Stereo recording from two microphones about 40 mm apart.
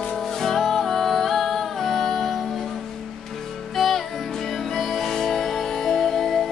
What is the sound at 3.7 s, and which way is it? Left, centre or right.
Music, centre.